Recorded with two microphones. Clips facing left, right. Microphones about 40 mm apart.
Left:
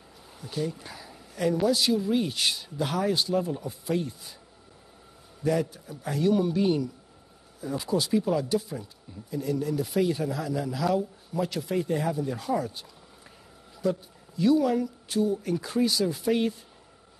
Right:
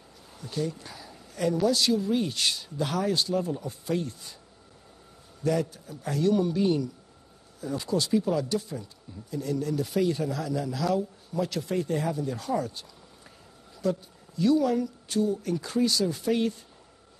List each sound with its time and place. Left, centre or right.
0.4 s a man's voice: centre
5.4 s a man's voice: centre